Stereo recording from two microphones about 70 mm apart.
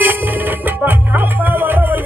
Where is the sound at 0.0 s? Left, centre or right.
Right.